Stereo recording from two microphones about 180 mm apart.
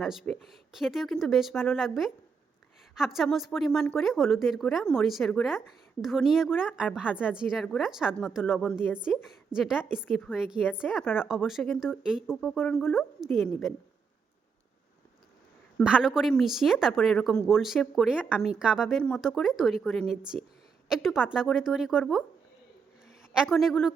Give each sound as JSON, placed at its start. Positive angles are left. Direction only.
{"t": 0.0, "sound": "a woman's voice", "side_deg": 0}
{"t": 15.8, "sound": "a woman's voice", "side_deg": -5}
{"t": 23.3, "sound": "a woman's voice", "side_deg": 0}